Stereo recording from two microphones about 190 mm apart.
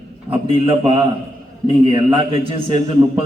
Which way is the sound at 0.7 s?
30° right (ahead or behind).